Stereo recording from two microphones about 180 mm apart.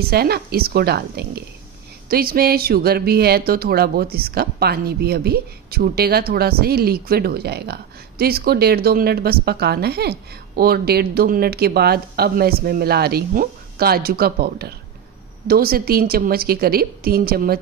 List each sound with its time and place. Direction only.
0.0 s speech: 60° right (ahead or behind)